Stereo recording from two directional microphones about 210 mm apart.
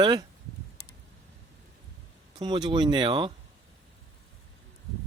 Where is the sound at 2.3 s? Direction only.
20° right (ahead or behind).